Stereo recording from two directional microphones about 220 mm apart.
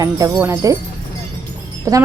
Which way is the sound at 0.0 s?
15° right (ahead or behind).